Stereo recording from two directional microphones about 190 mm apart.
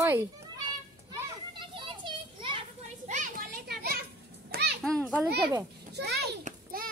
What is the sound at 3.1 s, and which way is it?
Children playing, 45° right (ahead or behind).